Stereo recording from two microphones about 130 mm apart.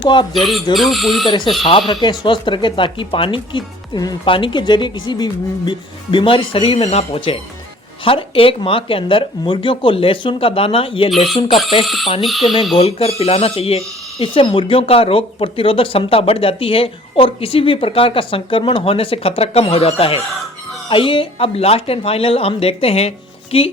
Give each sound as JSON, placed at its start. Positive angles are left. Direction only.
{"t": 0.0, "sound": "speech", "side_deg": 35}
{"t": 0.3, "sound": "speech", "side_deg": 0}
{"t": 1.9, "sound": "speech", "side_deg": 35}
{"t": 12.2, "sound": "speech", "side_deg": 0}
{"t": 12.7, "sound": "speech", "side_deg": 50}